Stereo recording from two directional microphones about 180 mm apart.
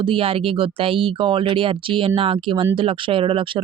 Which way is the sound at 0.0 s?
30° right (ahead or behind).